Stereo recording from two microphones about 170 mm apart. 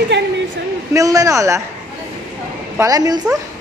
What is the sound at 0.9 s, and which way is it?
Speech, 20° right (ahead or behind).